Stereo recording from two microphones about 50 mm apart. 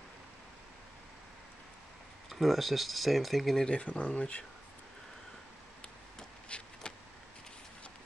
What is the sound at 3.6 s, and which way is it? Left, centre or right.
Speech, left.